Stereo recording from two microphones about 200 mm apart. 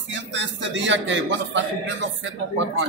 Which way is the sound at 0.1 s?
65° right (ahead or behind).